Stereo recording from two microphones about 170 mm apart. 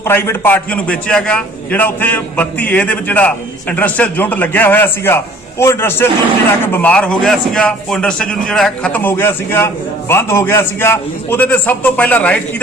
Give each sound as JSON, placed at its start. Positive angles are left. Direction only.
{"t": 0.0, "sound": "a man's voice", "side_deg": 15}